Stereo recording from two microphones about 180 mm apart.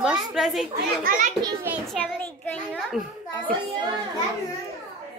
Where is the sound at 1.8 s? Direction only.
5° left (ahead or behind).